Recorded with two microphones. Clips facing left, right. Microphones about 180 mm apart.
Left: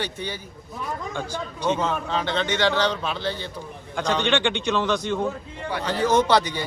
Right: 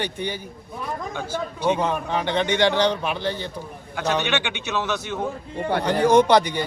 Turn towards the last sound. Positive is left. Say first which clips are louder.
# right 4 dB
turn(degrees=-15)  # may be behind; listen again after turning